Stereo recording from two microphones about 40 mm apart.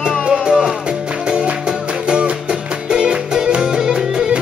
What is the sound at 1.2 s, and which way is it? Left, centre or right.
Music, right.